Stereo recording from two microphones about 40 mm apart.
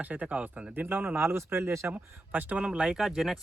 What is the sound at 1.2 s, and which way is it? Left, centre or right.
Speech, right.